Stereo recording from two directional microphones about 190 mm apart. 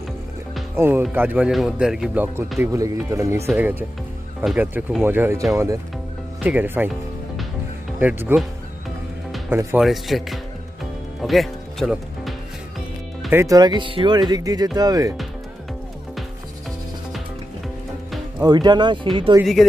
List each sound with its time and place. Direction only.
0.7 s speech: 10° right (ahead or behind)
6.4 s speech: 10° right (ahead or behind)
8.0 s speech: 10° right (ahead or behind)
9.5 s speech: 10° right (ahead or behind)
9.8 s speech: centre (ahead or behind)
11.2 s music: centre (ahead or behind)
13.3 s speech: 15° right (ahead or behind)
18.4 s speech: 20° right (ahead or behind)